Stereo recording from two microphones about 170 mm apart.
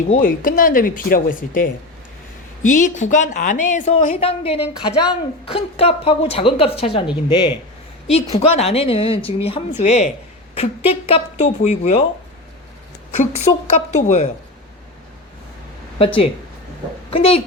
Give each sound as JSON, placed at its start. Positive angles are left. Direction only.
{"t": 0.1, "sound": "a woman's voice", "side_deg": 55}
{"t": 13.1, "sound": "a woman's voice", "side_deg": 40}
{"t": 16.0, "sound": "a woman's voice", "side_deg": 30}